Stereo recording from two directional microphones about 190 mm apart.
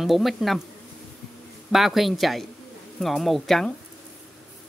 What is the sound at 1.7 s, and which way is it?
Speech, centre (ahead or behind).